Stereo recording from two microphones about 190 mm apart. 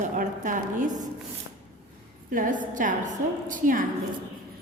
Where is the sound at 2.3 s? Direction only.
45° right (ahead or behind).